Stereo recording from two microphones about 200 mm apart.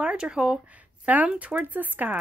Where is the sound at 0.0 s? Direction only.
5° right (ahead or behind).